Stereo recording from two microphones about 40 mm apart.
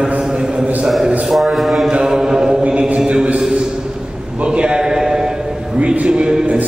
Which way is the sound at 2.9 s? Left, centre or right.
Right.